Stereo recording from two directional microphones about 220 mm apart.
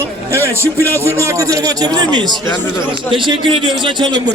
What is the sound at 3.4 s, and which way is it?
Speech, 25° right (ahead or behind).